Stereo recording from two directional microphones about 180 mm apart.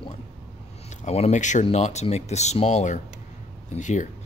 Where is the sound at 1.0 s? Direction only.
40° left (ahead or behind).